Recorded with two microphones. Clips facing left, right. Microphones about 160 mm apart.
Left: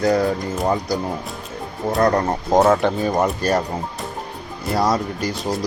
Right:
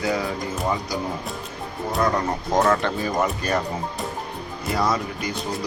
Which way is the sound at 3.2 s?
40° left (ahead or behind).